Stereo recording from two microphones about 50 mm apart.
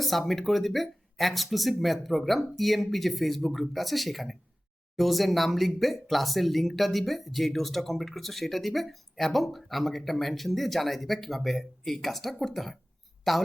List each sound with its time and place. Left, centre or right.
0.0 s speech: centre